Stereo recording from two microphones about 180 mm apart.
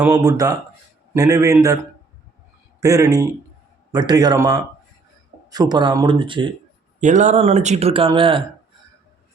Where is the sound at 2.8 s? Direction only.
20° right (ahead or behind).